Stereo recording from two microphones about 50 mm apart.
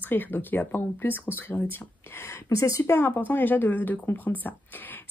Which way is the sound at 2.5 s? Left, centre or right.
Left.